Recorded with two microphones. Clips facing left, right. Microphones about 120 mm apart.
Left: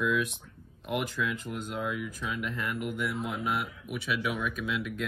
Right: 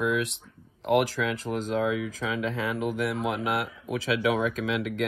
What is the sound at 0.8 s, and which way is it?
Speech, 90° right.